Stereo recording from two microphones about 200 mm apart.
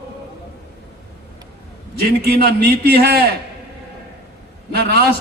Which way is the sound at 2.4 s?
50° right (ahead or behind).